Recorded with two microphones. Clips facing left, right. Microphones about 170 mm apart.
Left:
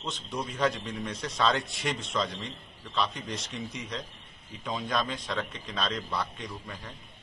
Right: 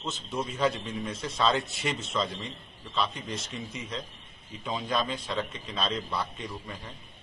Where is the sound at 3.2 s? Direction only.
Centre (ahead or behind).